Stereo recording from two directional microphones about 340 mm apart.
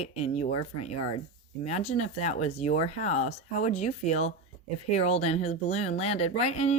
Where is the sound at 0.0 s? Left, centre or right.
Centre.